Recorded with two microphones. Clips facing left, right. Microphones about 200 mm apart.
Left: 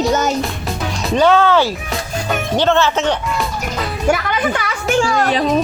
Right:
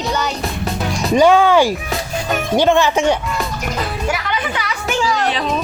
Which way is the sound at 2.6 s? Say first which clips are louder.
Right 2 dB; 15° right (ahead or behind).